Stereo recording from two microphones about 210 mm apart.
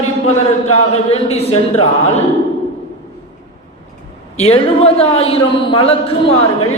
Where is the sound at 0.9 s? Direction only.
30° left (ahead or behind).